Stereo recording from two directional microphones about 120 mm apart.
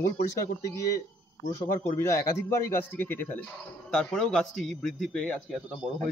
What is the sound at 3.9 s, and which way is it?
Speech, 5° left (ahead or behind).